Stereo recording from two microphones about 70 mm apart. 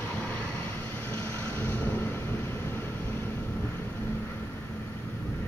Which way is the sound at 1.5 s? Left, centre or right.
Left.